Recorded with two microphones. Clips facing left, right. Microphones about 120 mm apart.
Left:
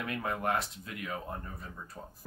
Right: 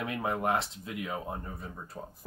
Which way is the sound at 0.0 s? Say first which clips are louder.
Right 3 dB; 20° right (ahead or behind).